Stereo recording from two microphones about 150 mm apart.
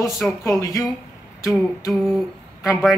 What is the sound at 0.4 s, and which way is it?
Speech, 20° left (ahead or behind).